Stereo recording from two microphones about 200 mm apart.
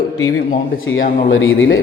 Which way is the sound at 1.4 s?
80° left.